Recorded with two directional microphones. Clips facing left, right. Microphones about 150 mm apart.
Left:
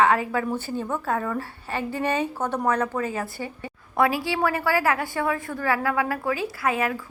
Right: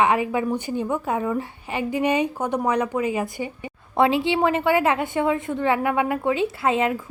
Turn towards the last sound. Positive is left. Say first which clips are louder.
# right 3 dB
turn(degrees=-25)  # may be behind; listen again after turning